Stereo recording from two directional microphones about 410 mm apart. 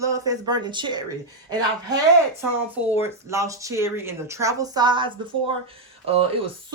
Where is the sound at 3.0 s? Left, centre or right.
Centre.